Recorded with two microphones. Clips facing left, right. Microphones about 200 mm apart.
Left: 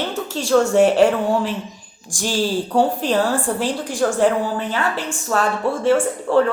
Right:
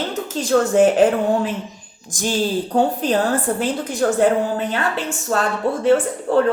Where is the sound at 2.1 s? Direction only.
20° right (ahead or behind).